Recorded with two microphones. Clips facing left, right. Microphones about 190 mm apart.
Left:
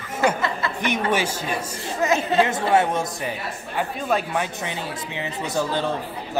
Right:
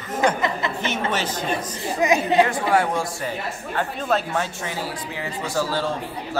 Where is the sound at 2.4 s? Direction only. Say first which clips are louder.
Left 1 dB; 20° left (ahead or behind).